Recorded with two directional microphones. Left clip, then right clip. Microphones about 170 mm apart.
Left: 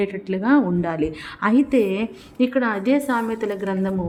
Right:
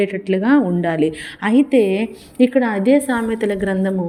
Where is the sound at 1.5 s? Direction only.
5° right (ahead or behind).